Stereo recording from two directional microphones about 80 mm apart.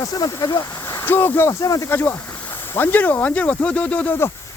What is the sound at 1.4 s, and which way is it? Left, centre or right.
Speech, left.